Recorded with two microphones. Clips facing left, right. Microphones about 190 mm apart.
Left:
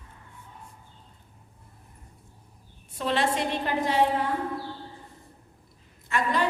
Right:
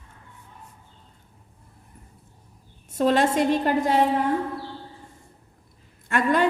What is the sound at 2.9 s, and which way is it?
A woman's voice, 45° right (ahead or behind).